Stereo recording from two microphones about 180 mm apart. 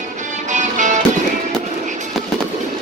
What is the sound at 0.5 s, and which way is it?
Music, 40° right (ahead or behind).